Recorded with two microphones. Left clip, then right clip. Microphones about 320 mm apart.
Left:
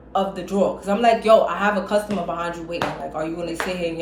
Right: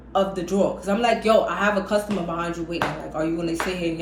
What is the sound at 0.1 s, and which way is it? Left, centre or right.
A man's voice, centre.